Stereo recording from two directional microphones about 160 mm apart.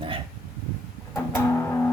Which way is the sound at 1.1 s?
15° left (ahead or behind).